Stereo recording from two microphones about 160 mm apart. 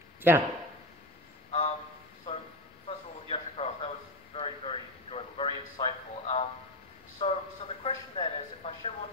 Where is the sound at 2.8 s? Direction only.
40° left (ahead or behind).